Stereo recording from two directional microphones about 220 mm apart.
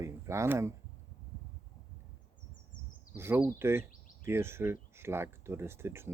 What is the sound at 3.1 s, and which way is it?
Speech, 10° right (ahead or behind).